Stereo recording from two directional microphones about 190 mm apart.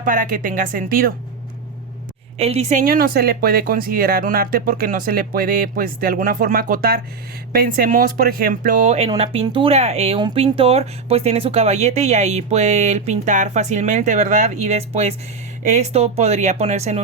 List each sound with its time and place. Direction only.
0.0 s speech: 45° right (ahead or behind)
2.4 s speech: 35° right (ahead or behind)
2.8 s speech: 50° right (ahead or behind); by 17.0 s 35° right (ahead or behind)